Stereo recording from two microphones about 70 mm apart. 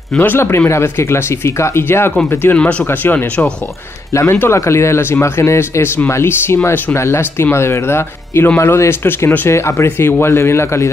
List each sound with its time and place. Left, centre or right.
0.2 s speech: left
2.5 s speech: centre
2.9 s speech: left
4.1 s speech: left